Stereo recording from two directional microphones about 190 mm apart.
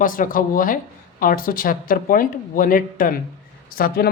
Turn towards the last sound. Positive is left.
turn(degrees=50)  # may be behind; listen again after turning